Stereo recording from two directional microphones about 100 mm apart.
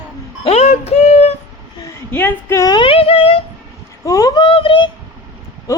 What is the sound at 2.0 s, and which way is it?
Speech, 20° left (ahead or behind).